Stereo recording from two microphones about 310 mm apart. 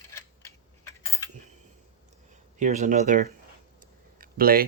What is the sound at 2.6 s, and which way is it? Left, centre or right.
Speech, right.